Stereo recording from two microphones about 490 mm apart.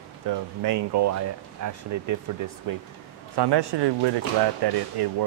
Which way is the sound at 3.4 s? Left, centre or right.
Right.